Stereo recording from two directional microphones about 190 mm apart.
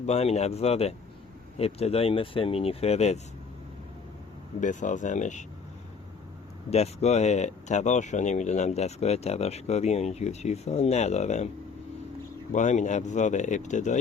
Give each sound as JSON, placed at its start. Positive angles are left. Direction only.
{"t": 0.0, "sound": "speech", "side_deg": 35}
{"t": 4.6, "sound": "speech", "side_deg": 40}
{"t": 6.7, "sound": "speech", "side_deg": 35}
{"t": 12.5, "sound": "speech", "side_deg": 40}